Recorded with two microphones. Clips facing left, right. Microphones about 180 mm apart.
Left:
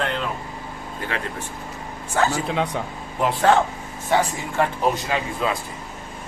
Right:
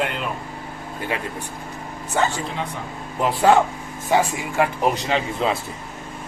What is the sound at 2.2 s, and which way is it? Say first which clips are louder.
A man's voice: left 2 dB; centre (ahead or behind).